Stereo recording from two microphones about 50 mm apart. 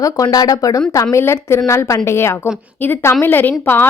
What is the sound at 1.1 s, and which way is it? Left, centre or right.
A woman's voice, left.